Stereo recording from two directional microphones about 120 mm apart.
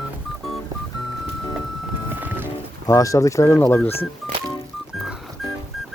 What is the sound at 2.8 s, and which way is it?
Speech, 30° left (ahead or behind).